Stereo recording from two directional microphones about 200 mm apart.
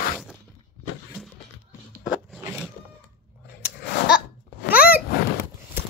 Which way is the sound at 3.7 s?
50° left (ahead or behind).